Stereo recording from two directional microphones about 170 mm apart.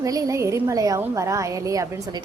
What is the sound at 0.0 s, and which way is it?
A woman's voice, 20° right (ahead or behind).